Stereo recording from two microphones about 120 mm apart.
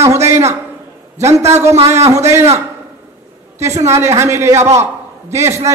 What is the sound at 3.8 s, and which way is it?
Speech, 20° right (ahead or behind).